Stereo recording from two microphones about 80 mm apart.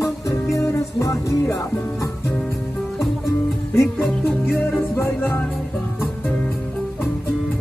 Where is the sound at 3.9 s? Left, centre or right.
Left.